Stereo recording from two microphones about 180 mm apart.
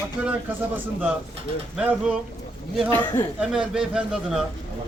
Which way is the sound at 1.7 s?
10° right (ahead or behind).